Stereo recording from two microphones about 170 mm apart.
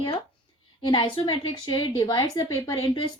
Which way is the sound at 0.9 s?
30° left (ahead or behind).